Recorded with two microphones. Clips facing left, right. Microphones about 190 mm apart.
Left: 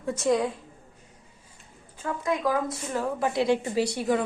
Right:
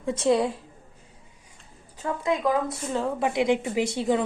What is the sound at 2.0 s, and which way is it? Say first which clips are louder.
A woman's voice: right 2 dB; 20° right (ahead or behind).